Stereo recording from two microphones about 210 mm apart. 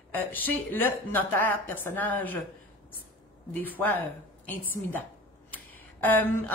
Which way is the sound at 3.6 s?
10° left (ahead or behind).